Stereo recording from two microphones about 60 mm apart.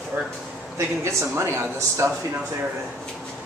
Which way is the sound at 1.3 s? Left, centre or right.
Right.